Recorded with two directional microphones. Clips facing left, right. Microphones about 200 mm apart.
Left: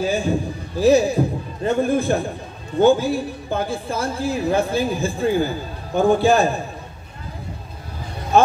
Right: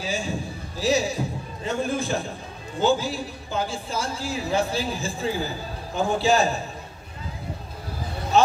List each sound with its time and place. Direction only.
0.0 s a man's voice: 55° left (ahead or behind)